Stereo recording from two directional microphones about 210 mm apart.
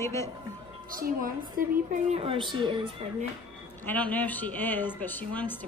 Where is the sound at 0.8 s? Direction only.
40° right (ahead or behind); by 3.3 s 25° right (ahead or behind).